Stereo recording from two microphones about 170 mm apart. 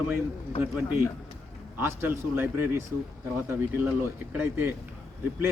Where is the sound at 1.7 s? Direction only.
10° right (ahead or behind).